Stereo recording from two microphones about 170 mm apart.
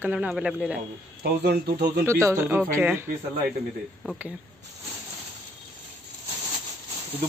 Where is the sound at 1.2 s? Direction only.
75° right (ahead or behind).